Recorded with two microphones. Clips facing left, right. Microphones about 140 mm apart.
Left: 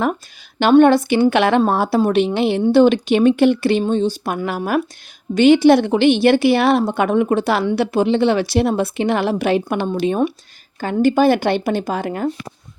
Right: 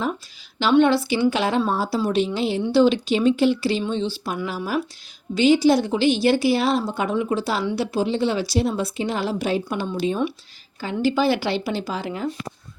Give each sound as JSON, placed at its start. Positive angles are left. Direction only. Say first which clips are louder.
{"t": 0.6, "sound": "a woman's voice", "louder": "left 6 dB", "side_deg": 50}